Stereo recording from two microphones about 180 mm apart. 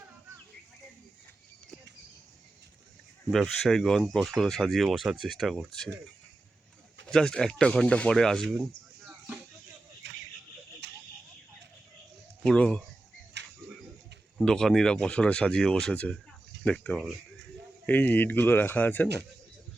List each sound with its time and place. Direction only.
3.3 s speech: centre (ahead or behind)
7.1 s speech: 5° left (ahead or behind)
10.0 s a sound: 80° right
12.4 s speech: 5° left (ahead or behind)
13.4 s a sound: 75° right (ahead or behind)
14.3 s speech: 5° left (ahead or behind)